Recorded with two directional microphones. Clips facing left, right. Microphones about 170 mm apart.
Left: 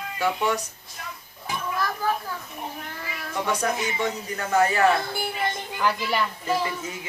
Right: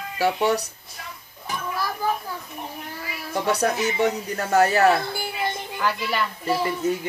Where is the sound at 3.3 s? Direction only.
35° right (ahead or behind).